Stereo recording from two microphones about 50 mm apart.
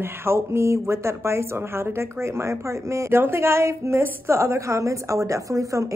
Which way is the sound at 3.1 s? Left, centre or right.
Right.